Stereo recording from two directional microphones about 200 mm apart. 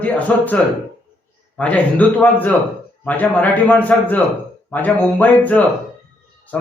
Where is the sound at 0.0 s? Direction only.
5° left (ahead or behind).